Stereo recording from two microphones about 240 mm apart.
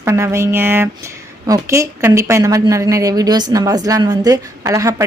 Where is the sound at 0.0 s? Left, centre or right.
Centre.